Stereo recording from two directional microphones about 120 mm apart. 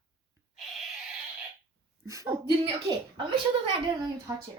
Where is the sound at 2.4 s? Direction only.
45° right (ahead or behind).